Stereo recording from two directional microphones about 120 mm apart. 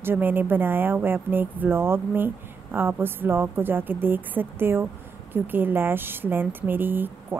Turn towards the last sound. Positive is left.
turn(degrees=-15)  # may be behind; listen again after turning